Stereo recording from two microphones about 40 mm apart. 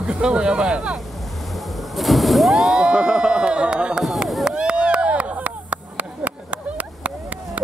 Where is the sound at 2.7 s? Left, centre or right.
Right.